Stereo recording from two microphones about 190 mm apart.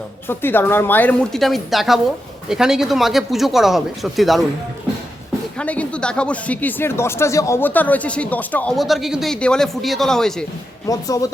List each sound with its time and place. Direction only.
0.3 s speech: 10° left (ahead or behind)
5.5 s speech: 5° left (ahead or behind)
10.8 s speech: 20° left (ahead or behind)